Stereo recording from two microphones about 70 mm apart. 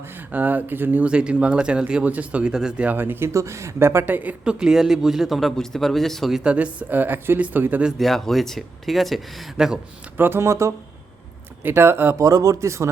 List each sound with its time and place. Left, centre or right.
0.3 s speech: right
4.0 s speech: right
4.5 s speech: centre
6.3 s speech: centre
7.9 s speech: centre
10.2 s speech: right
12.2 s speech: right